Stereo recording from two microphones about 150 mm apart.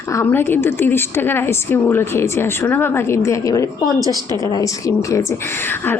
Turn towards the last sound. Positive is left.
turn(degrees=20)  # may be behind; listen again after turning